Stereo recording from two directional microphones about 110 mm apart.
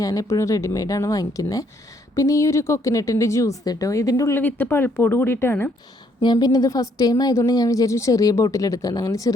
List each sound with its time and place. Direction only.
0.0 s a woman's voice: 30° left (ahead or behind)
4.4 s a woman's voice: 15° left (ahead or behind)
6.2 s a woman's voice: 40° left (ahead or behind)